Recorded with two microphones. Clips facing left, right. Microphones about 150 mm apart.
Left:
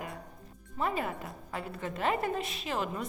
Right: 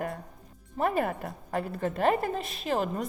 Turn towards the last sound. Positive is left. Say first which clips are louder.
# right 5 dB
turn(degrees=-40)  # may be behind; listen again after turning